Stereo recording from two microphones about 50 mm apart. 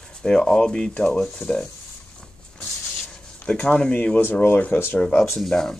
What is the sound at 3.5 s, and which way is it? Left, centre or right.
Speech, left.